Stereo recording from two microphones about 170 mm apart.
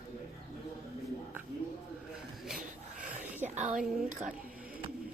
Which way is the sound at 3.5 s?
45° right (ahead or behind).